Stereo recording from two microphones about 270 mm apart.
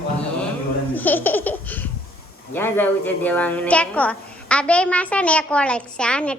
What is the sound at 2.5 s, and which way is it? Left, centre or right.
A woman's voice, centre.